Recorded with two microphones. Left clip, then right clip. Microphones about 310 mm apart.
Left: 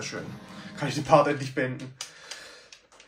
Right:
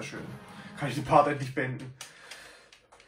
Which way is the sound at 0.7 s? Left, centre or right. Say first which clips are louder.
Left 2 dB; centre.